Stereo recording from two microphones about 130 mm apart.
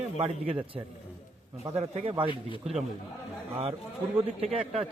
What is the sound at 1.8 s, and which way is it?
Speech, 50° right (ahead or behind).